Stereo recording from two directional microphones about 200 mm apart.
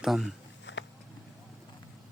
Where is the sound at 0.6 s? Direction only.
65° left (ahead or behind).